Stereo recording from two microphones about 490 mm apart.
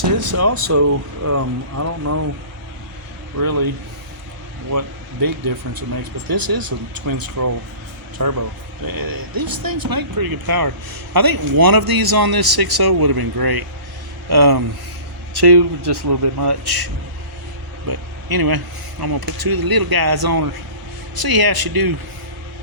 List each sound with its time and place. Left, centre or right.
0.2 s speech: right
3.4 s a man's voice: right
5.7 s a man's voice: right